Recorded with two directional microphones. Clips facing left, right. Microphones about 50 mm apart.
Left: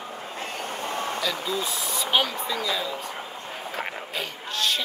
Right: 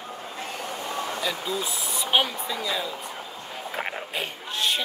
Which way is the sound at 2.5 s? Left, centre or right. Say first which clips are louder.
Left 1 dB; right.